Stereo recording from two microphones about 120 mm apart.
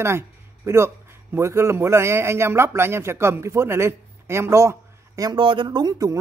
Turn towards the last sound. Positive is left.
turn(degrees=-30)  # may be behind; listen again after turning